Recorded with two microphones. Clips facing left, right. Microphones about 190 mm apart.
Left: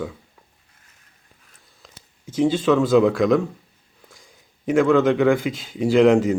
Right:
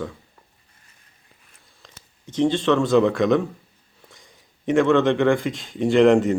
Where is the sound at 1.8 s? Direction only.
5° left (ahead or behind).